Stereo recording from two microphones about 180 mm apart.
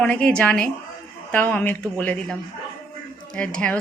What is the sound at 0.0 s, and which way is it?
A woman's voice, 5° left (ahead or behind).